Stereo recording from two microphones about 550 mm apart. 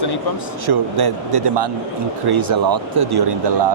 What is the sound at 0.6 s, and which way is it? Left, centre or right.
Speech, right.